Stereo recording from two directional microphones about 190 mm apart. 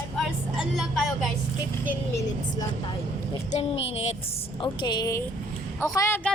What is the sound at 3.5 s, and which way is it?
A woman's voice, 30° left (ahead or behind).